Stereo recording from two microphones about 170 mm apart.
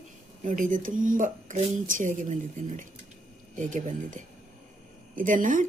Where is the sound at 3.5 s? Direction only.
50° right (ahead or behind).